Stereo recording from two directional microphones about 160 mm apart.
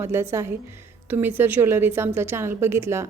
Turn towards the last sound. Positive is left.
turn(degrees=-15)  # may be behind; listen again after turning